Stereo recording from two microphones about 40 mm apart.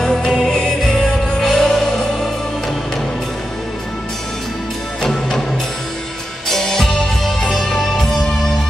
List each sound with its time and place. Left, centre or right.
0.0 s music: centre
5.0 s music: centre
6.5 s music: centre